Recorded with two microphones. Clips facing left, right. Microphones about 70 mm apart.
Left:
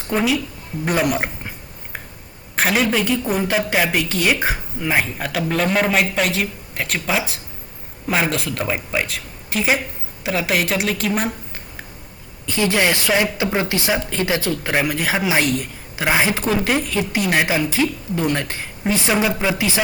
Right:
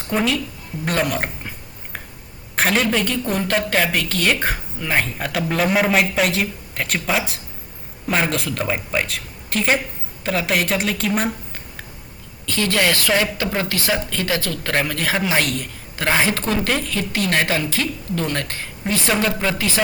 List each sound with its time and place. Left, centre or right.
0.1 s a woman's voice: centre
0.9 s a sound: centre
2.6 s a woman's voice: centre
12.5 s a woman's voice: centre